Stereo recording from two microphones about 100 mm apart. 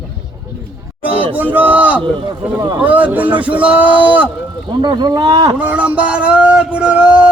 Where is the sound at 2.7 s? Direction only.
15° right (ahead or behind).